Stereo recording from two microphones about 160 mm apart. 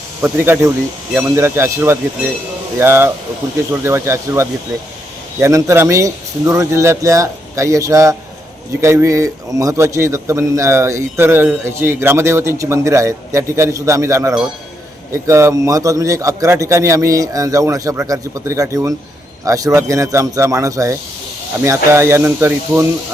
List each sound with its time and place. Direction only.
0.2 s a man's voice: 15° right (ahead or behind)